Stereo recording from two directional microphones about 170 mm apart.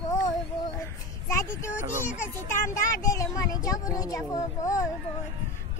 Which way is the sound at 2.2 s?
15° left (ahead or behind).